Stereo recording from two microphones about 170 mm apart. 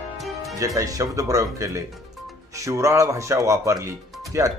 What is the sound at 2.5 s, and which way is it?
Speech, 20° right (ahead or behind).